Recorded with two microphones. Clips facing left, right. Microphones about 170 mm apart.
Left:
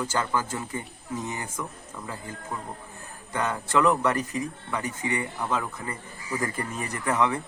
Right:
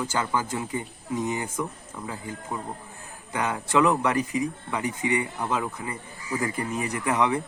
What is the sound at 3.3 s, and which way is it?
Speech, 10° right (ahead or behind).